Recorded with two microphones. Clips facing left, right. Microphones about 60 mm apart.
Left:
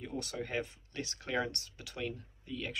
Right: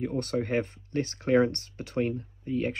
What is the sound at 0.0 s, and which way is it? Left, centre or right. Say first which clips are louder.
Speech: right 10 dB; right.